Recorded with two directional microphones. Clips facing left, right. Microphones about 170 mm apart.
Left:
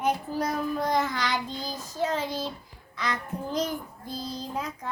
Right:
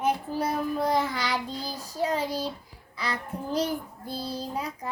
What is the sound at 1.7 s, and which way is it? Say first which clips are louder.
Child singing: right 1 dB; 35° right (ahead or behind).